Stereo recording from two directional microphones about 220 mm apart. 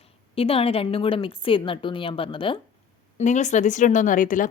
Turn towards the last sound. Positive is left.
turn(degrees=35)  # may be behind; listen again after turning